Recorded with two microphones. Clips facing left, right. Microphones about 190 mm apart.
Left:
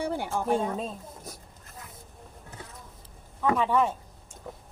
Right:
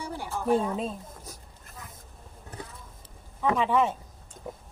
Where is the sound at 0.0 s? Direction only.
55° left (ahead or behind).